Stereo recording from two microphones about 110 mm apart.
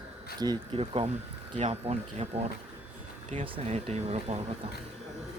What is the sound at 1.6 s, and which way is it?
Speech, 70° right (ahead or behind).